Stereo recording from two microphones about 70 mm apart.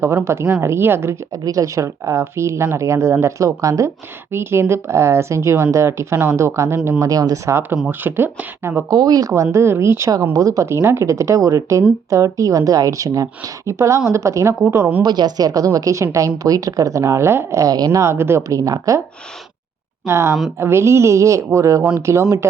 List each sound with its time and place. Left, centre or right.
0.0 s speech: right
1.5 s speech: right
7.0 s speech: right
7.9 s speech: right
8.9 s speech: right
9.3 s speech: right
10.3 s speech: right
15.0 s speech: right
17.6 s speech: right
18.0 s speech: right
18.4 s speech: right
20.1 s speech: right